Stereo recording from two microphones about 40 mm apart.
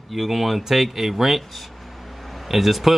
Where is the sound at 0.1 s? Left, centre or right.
Centre.